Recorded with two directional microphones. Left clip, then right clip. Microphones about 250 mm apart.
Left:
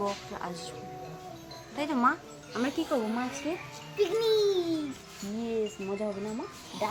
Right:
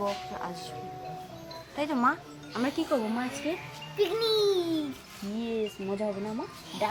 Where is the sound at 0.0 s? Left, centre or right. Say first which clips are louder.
Right 1 dB; centre.